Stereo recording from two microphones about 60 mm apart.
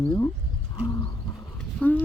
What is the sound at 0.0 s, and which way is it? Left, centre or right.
Speech, left.